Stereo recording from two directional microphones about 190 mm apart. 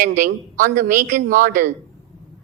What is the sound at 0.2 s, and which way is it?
A woman's voice, 45° right (ahead or behind).